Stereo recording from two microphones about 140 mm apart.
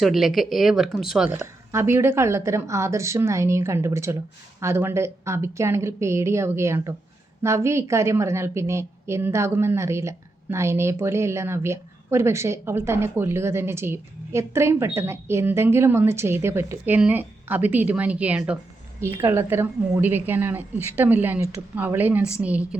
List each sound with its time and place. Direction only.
0.0 s speech: centre (ahead or behind)
1.7 s a woman's voice: 15° right (ahead or behind)